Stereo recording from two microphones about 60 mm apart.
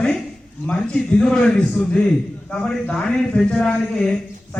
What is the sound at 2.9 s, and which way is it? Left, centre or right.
A man's voice, centre.